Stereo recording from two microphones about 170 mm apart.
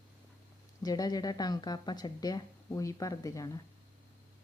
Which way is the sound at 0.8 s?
20° left (ahead or behind).